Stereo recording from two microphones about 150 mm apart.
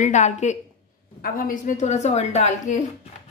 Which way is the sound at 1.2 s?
70° left (ahead or behind).